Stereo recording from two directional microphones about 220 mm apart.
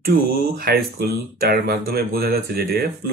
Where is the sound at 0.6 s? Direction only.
45° right (ahead or behind).